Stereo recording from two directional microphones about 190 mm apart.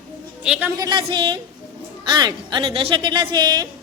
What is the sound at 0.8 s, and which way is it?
A woman's voice, 25° right (ahead or behind).